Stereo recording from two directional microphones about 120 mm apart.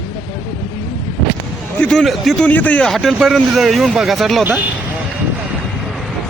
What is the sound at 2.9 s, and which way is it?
Speech, centre (ahead or behind).